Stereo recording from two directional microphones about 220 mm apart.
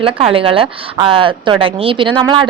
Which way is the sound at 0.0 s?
25° right (ahead or behind).